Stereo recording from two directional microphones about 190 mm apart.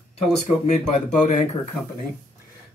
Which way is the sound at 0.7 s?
40° left (ahead or behind).